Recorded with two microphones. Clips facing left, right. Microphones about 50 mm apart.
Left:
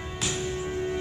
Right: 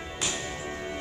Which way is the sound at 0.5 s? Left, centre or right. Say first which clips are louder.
Left 5 dB; right.